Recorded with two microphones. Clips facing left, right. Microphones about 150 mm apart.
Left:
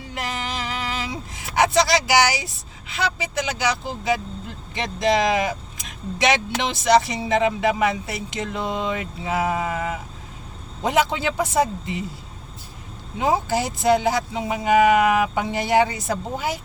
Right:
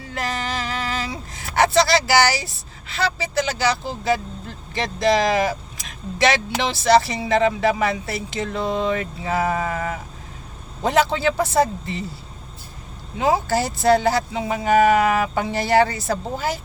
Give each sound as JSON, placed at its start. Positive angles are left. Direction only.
{"t": 0.1, "sound": "vehicle", "side_deg": 15}
{"t": 2.9, "sound": "speech", "side_deg": 15}
{"t": 13.1, "sound": "speech", "side_deg": 20}